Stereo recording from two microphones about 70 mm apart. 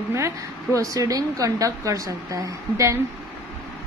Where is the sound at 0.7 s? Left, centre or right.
Right.